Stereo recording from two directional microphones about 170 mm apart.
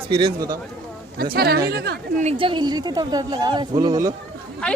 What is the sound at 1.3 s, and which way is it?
Speech, 65° right (ahead or behind).